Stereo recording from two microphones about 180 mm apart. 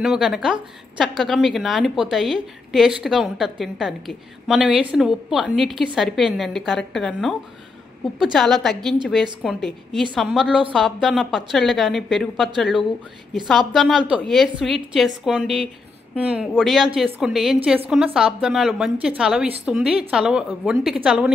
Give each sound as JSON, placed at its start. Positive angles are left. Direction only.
{"t": 0.0, "sound": "a woman's voice", "side_deg": -5}